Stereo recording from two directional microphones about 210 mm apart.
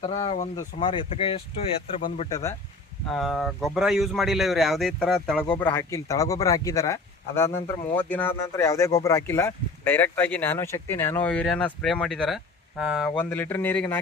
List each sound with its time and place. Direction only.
0.0 s speech: 30° left (ahead or behind)
2.0 s speech: 40° left (ahead or behind)
2.3 s speech: 15° left (ahead or behind)
3.1 s speech: centre (ahead or behind)
13.3 s speech: 10° left (ahead or behind)